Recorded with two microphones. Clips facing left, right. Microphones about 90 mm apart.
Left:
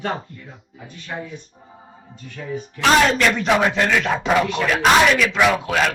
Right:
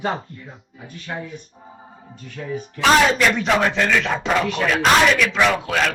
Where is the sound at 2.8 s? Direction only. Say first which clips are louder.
Even; centre (ahead or behind).